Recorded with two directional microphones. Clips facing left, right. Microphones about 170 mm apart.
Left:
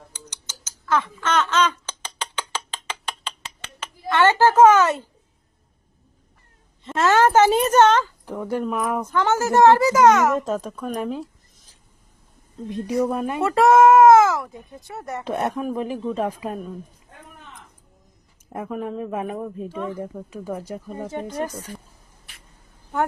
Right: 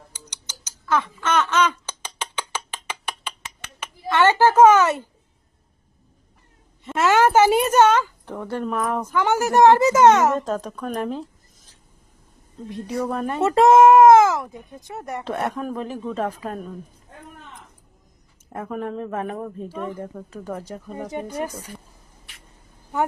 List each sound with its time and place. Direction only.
1.2 s a sound: 10° right (ahead or behind)
3.8 s a child's voice: 10° right (ahead or behind)
6.8 s a woman's voice: 10° right (ahead or behind)
8.2 s a man's voice: 10° left (ahead or behind)
9.0 s speech: 10° right (ahead or behind); by 10.3 s 30° right (ahead or behind)
10.3 s speech: 5° left (ahead or behind)
13.1 s a man's voice: 10° left (ahead or behind)
13.4 s speech: 20° right (ahead or behind)
15.2 s a man's voice: 15° left (ahead or behind)
18.5 s a man's voice: 5° left (ahead or behind)
21.1 s a woman's voice: 10° right (ahead or behind)